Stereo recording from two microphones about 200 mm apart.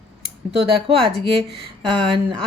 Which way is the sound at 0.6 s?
25° right (ahead or behind).